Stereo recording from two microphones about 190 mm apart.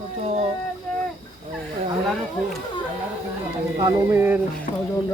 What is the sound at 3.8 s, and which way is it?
Speech, 10° right (ahead or behind).